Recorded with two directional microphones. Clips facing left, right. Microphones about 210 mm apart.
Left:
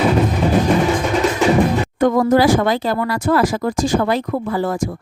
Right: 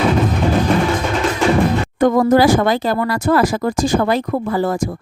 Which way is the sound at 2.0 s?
40° right (ahead or behind).